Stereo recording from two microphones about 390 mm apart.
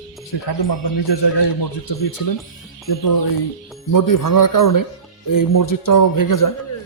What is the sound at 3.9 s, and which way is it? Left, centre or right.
Speech, left.